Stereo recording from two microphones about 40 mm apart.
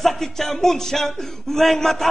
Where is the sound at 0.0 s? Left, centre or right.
Centre.